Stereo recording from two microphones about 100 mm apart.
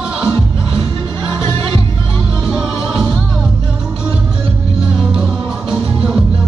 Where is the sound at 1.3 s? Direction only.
25° left (ahead or behind).